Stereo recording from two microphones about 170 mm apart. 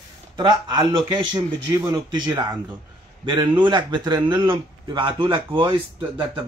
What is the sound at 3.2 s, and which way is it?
A man's voice, 30° right (ahead or behind).